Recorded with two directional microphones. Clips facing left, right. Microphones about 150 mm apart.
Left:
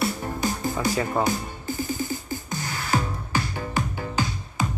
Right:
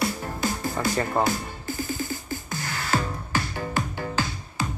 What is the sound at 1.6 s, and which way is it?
Music, 15° left (ahead or behind).